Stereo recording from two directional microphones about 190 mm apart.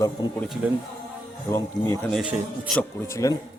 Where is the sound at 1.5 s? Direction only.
15° left (ahead or behind).